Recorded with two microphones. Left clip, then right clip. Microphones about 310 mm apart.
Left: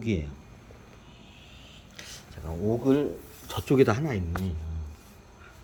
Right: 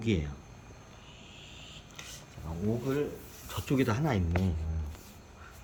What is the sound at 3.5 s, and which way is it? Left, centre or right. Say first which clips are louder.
Speech: left 8 dB; centre.